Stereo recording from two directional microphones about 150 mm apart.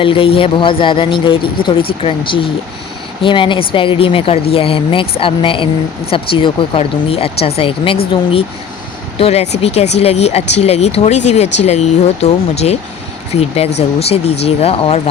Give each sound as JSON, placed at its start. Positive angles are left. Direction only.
{"t": 0.0, "sound": "speech", "side_deg": 35}